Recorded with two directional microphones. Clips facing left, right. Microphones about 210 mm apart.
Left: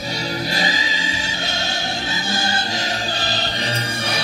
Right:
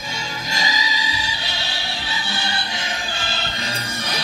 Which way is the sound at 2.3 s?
40° left (ahead or behind).